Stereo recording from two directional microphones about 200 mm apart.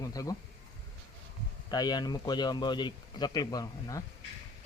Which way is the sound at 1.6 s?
20° left (ahead or behind).